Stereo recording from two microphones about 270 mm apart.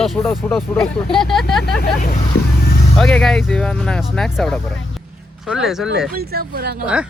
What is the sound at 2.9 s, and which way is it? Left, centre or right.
Speech, centre.